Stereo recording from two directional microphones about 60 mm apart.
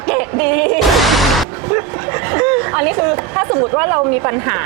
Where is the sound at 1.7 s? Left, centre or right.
Right.